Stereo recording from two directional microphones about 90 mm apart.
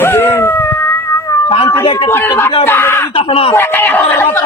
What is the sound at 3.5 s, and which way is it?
Speech, 25° left (ahead or behind).